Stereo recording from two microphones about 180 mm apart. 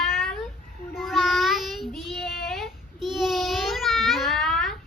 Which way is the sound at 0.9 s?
Centre (ahead or behind).